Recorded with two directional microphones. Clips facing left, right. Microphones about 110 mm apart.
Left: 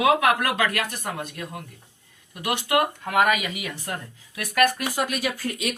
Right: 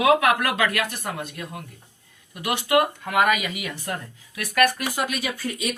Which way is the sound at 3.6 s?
25° left (ahead or behind).